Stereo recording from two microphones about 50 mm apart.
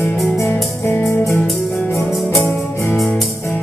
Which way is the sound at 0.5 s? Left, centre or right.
Left.